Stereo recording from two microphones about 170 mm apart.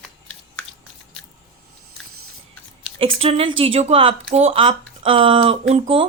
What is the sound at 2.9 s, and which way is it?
Speech, 35° right (ahead or behind).